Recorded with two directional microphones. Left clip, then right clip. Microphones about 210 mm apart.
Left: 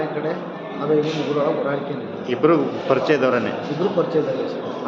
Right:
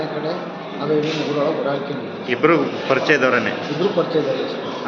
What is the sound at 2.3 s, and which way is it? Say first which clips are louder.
A man's voice: right 1 dB; 5° left (ahead or behind).